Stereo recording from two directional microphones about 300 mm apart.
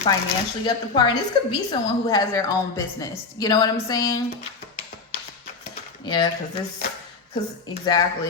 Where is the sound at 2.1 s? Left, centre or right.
Centre.